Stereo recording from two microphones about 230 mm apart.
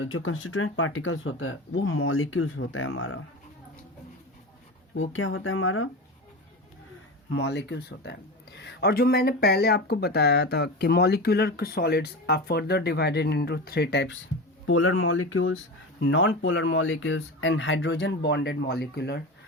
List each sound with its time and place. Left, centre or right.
0.1 s speech: left
5.1 s speech: left
7.3 s speech: left
14.7 s speech: left